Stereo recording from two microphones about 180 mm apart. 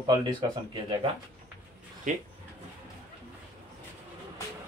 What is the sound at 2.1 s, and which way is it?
Speech, 45° right (ahead or behind).